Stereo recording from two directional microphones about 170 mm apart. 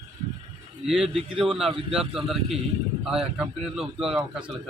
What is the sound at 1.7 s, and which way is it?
Speech, 30° right (ahead or behind).